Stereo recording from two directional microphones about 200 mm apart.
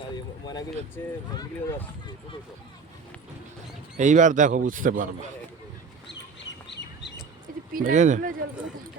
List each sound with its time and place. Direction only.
0.9 s speech: 10° left (ahead or behind)
3.9 s speech: 40° right (ahead or behind)
6.1 s bird: 60° left (ahead or behind)
7.7 s speech: 40° right (ahead or behind)